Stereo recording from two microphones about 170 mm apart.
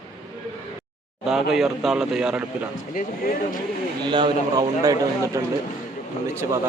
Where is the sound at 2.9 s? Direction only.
55° left (ahead or behind).